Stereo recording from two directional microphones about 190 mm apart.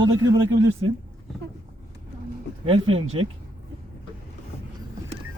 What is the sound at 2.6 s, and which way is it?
Speech, 30° right (ahead or behind).